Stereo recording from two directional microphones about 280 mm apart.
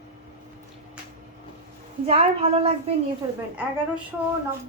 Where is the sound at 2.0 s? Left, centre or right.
Centre.